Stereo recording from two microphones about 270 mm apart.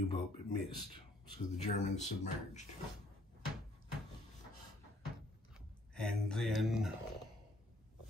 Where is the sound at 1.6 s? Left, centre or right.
Left.